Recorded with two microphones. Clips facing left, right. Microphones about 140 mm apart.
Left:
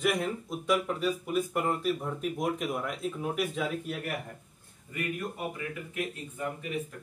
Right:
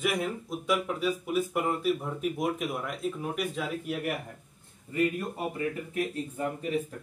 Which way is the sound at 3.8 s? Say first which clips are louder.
Right 4 dB; 10° right (ahead or behind).